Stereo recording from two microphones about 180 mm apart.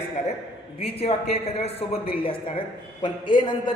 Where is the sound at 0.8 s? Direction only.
35° left (ahead or behind).